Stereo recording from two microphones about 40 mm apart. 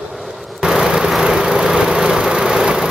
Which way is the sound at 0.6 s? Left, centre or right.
Centre.